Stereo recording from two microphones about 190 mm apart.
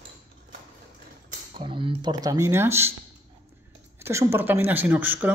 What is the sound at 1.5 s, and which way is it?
Speech, 25° right (ahead or behind).